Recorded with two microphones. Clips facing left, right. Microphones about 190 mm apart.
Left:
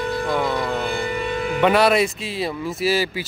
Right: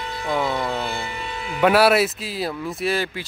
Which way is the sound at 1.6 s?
5° right (ahead or behind).